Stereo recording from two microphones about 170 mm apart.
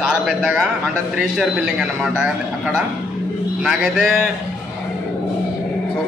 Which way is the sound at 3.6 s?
Centre (ahead or behind).